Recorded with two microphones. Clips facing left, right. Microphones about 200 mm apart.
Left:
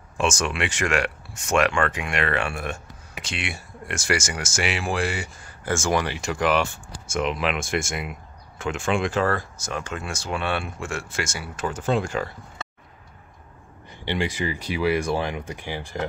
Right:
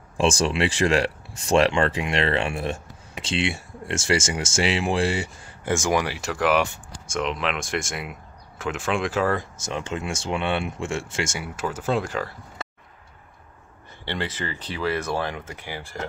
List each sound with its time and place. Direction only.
0.2 s speech: 30° right (ahead or behind); by 6.7 s 5° right (ahead or behind)
6.9 s speech: 5° left (ahead or behind)
9.3 s speech: 20° right (ahead or behind)
11.5 s speech: 5° right (ahead or behind)
14.0 s speech: 10° left (ahead or behind)